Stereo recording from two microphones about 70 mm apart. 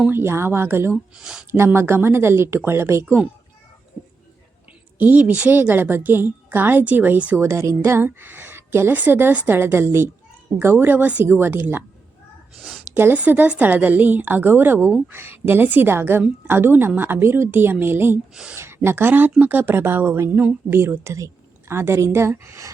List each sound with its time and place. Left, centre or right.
0.1 s a woman's voice: right
1.2 s speech: centre
1.5 s a woman's voice: right
4.9 s a woman's voice: right
7.3 s a woman's voice: right
12.5 s a sound: centre
13.1 s a woman's voice: right